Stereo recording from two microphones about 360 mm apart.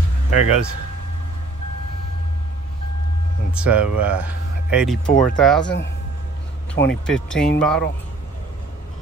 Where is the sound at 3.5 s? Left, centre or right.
Centre.